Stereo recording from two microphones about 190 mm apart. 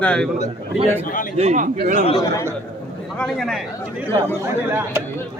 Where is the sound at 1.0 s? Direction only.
45° left (ahead or behind).